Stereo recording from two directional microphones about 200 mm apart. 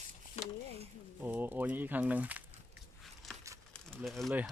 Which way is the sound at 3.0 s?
Centre (ahead or behind).